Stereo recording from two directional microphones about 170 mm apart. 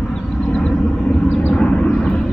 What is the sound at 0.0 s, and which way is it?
Vehicle, 5° left (ahead or behind).